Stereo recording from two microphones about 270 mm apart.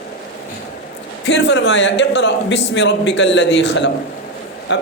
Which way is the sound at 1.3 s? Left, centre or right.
Left.